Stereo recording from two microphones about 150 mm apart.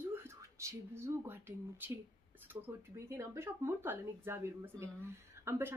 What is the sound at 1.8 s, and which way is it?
Speech, 15° right (ahead or behind).